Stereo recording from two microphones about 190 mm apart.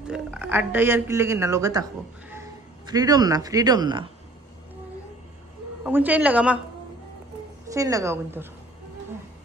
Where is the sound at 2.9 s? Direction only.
20° right (ahead or behind).